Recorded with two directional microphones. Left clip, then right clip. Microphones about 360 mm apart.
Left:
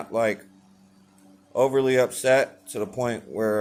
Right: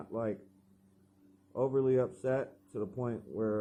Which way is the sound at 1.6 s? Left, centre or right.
Centre.